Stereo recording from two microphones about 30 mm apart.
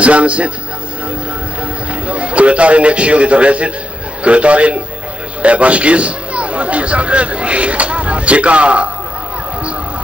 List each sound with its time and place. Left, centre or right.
0.0 s a man's voice: right
2.0 s a man's voice: right